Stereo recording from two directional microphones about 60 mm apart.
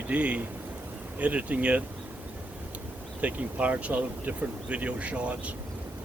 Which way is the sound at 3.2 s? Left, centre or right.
Right.